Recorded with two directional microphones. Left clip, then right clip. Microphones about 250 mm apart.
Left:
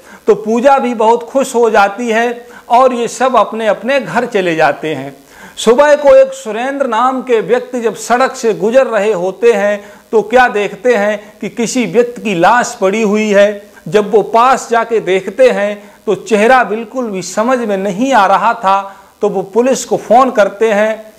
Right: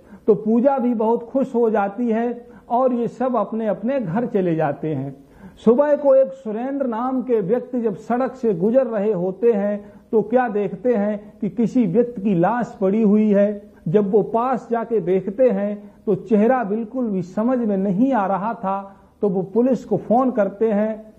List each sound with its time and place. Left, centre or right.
0.5 s a man's voice: centre
19.2 s speech: left
19.6 s speech: centre
20.2 s a man's voice: centre